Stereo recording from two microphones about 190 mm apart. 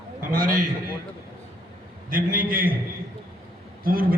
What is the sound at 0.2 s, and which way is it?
Speech, 45° right (ahead or behind).